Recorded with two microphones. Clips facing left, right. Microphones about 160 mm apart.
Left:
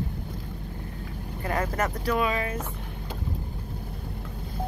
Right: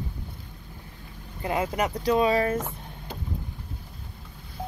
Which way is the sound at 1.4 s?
15° right (ahead or behind).